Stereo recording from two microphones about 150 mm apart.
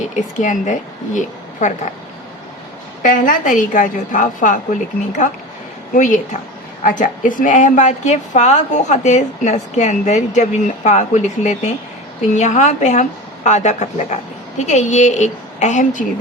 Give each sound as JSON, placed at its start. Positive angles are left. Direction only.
{"t": 0.2, "sound": "a woman's voice", "side_deg": 55}
{"t": 3.0, "sound": "a woman's voice", "side_deg": 65}